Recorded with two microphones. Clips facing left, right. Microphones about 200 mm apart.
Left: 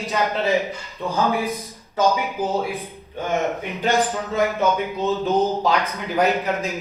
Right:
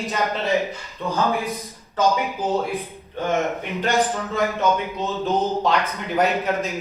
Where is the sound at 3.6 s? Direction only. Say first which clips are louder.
Left 1 dB; 15° left (ahead or behind).